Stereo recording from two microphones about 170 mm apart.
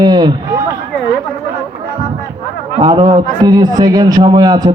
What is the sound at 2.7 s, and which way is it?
A man's voice, 25° right (ahead or behind).